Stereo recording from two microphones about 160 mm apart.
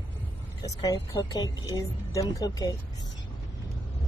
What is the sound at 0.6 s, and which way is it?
A woman's voice, 25° left (ahead or behind).